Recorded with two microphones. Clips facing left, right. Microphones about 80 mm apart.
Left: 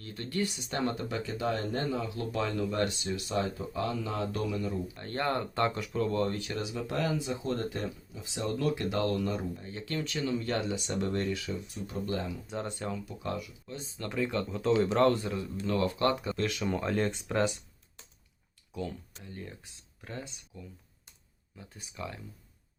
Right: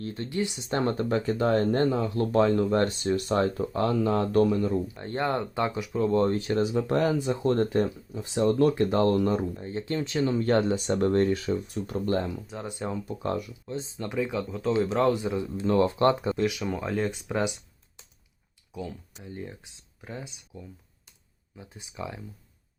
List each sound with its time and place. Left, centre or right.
0.0 s speech: right
0.3 s speech: centre; by 4.8 s right
4.9 s speech: centre; by 12.2 s right
12.5 s speech: centre
13.1 s speech: right
13.7 s speech: right
14.1 s speech: centre
15.2 s speech: right
16.4 s speech: centre
18.7 s speech: centre
19.2 s speech: centre